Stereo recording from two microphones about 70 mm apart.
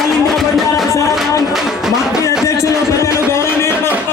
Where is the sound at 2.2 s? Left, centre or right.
Left.